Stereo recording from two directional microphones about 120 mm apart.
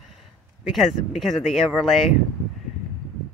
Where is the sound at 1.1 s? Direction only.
Centre (ahead or behind).